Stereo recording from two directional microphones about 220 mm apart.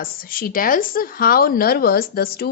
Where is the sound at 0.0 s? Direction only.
40° left (ahead or behind).